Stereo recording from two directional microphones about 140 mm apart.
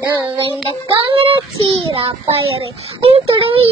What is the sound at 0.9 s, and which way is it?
A child's voice, 40° right (ahead or behind).